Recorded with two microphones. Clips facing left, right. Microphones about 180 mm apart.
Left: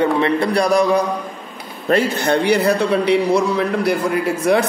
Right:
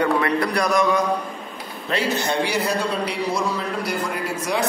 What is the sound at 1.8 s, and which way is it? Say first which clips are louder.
A man's voice: left 7 dB; 55° left (ahead or behind).